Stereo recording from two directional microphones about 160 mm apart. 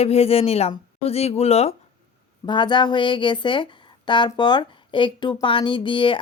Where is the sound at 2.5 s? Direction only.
30° left (ahead or behind).